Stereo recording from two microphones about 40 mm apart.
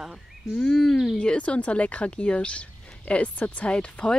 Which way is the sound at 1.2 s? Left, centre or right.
Left.